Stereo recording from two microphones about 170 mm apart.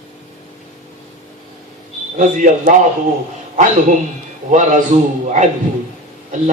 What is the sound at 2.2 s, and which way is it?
Speech, 45° right (ahead or behind).